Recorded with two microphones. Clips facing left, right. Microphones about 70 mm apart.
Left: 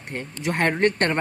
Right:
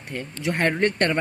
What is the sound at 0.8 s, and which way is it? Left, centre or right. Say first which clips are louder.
Speech: left 1 dB; left.